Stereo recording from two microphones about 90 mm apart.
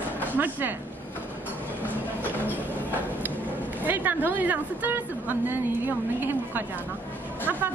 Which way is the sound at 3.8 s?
20° right (ahead or behind).